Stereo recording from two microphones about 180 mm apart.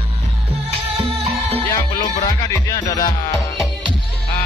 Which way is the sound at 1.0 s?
30° right (ahead or behind).